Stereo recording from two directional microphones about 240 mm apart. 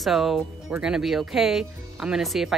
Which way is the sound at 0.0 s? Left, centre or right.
Centre.